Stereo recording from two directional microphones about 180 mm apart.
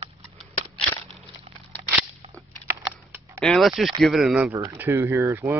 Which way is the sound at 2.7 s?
15° right (ahead or behind).